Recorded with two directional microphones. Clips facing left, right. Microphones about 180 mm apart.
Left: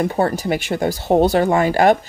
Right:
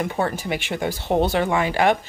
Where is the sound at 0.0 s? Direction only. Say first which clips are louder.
Left 5 dB; 40° left (ahead or behind).